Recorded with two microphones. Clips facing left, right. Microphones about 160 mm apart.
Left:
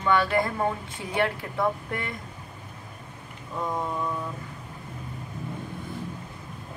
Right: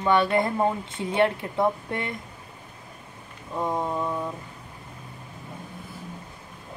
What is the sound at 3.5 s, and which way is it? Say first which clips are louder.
Speech: right 3 dB; 25° right (ahead or behind).